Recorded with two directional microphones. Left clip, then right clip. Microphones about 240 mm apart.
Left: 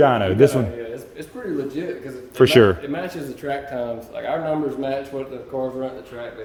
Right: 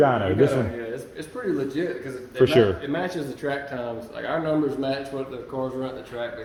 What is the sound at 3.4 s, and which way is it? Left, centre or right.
Speech, left.